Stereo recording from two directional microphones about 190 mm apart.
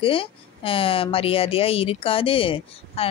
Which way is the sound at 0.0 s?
30° left (ahead or behind).